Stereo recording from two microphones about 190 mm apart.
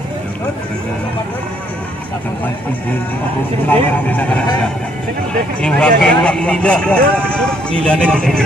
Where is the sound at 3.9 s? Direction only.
10° left (ahead or behind).